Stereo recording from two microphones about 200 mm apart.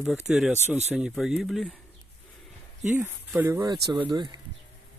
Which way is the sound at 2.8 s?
10° right (ahead or behind).